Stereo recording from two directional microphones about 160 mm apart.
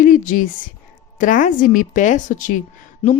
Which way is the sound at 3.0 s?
40° left (ahead or behind).